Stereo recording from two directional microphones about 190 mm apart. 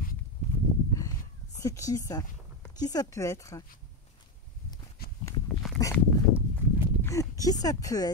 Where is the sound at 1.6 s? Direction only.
15° left (ahead or behind).